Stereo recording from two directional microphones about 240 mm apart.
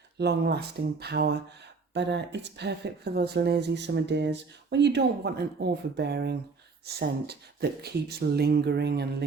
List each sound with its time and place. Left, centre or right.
0.2 s speech: right